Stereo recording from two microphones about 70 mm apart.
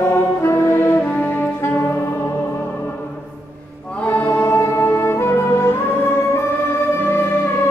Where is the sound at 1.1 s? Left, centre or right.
Left.